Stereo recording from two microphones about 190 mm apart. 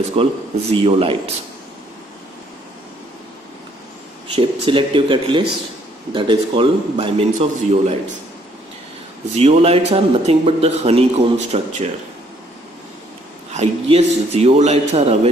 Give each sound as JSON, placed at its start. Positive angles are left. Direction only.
{"t": 0.1, "sound": "a man's voice", "side_deg": -30}
{"t": 4.4, "sound": "a man's voice", "side_deg": -25}
{"t": 9.4, "sound": "a man's voice", "side_deg": -35}
{"t": 13.5, "sound": "a man's voice", "side_deg": -35}